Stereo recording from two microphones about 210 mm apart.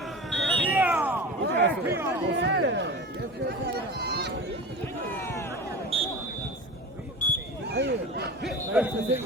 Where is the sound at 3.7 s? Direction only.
50° right (ahead or behind).